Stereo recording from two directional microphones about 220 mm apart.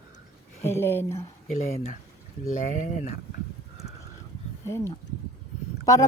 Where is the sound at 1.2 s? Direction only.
30° left (ahead or behind).